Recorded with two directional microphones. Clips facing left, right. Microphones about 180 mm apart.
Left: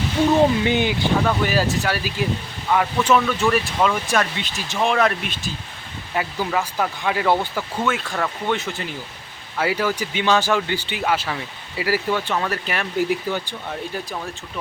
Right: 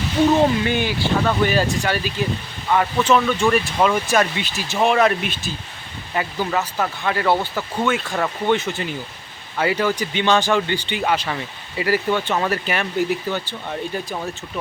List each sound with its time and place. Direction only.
0.6 s speech: 20° left (ahead or behind)
1.2 s speech: 5° left (ahead or behind)
7.5 s speech: centre (ahead or behind)
13.0 s speech: 10° left (ahead or behind)